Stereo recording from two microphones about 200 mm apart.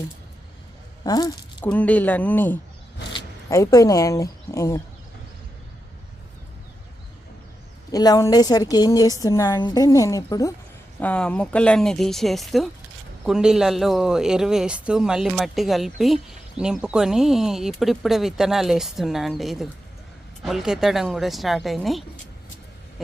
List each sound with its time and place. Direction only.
1.0 s speech: 20° left (ahead or behind)
1.6 s a woman's voice: 5° left (ahead or behind)
7.9 s a woman's voice: 20° left (ahead or behind)
11.0 s a man's voice: 5° left (ahead or behind)